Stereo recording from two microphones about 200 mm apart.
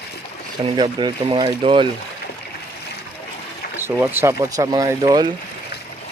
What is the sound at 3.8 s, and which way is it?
Speech, 10° right (ahead or behind).